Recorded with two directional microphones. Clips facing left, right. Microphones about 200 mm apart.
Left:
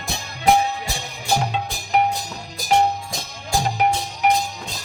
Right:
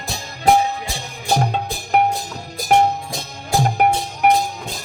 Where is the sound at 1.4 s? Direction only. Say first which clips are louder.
Right 3 dB; 45° right (ahead or behind).